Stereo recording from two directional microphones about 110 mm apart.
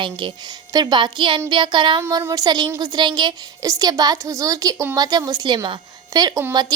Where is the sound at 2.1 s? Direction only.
35° right (ahead or behind).